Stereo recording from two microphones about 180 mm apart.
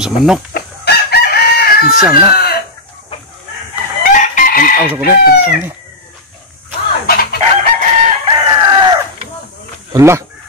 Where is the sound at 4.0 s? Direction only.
45° left (ahead or behind).